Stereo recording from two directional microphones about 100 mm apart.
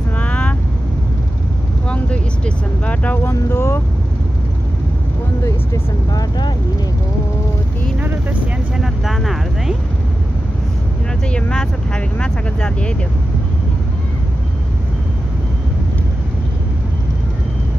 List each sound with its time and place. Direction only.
0.2 s vehicle: 15° left (ahead or behind)
1.9 s vehicle: 10° left (ahead or behind)
3.3 s speech: 25° left (ahead or behind)
5.4 s vehicle: 30° left (ahead or behind)
8.7 s vehicle: 5° right (ahead or behind)
11.3 s vehicle: 10° left (ahead or behind)